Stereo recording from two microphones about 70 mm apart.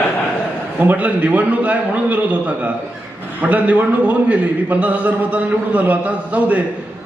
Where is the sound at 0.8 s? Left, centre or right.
Right.